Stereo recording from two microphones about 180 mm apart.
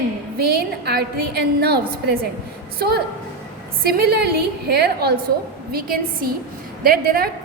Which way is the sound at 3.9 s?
65° right (ahead or behind).